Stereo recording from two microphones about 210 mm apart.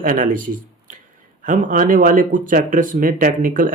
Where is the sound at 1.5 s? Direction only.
40° right (ahead or behind).